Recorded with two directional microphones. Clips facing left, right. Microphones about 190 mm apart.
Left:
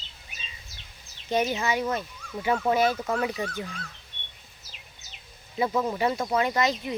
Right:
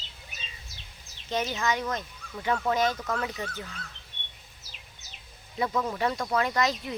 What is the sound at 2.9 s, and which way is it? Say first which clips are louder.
Speech: left 4 dB; 25° left (ahead or behind).